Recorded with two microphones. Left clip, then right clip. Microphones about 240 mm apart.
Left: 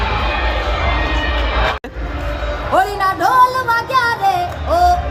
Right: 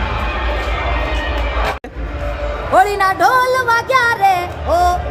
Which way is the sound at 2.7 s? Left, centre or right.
Centre.